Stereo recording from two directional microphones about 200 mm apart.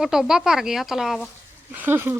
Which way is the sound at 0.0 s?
Centre (ahead or behind).